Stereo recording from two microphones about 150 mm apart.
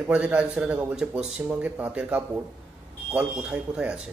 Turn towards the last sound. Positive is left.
turn(degrees=-5)  # may be behind; listen again after turning